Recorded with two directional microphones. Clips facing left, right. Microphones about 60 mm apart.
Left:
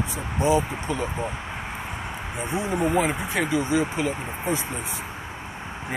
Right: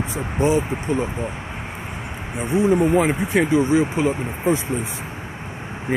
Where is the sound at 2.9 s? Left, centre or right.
Right.